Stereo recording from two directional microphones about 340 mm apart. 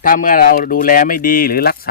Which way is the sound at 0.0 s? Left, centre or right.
Left.